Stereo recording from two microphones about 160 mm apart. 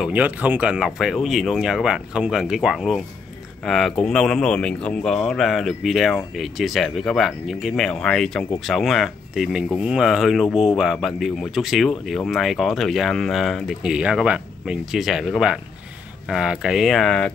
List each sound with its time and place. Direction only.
0.0 s speech: 10° right (ahead or behind)